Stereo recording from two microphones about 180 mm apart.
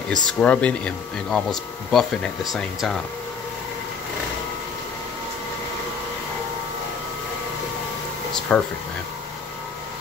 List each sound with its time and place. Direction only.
0.1 s speech: 5° left (ahead or behind)
8.3 s speech: 5° left (ahead or behind)